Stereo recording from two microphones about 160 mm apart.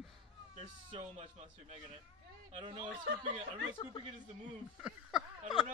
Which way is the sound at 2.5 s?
30° right (ahead or behind).